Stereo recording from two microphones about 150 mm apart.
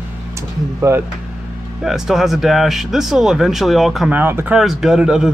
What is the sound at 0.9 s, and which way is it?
Speech, 20° right (ahead or behind).